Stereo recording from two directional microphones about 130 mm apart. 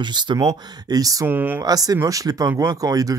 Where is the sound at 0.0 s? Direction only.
35° right (ahead or behind).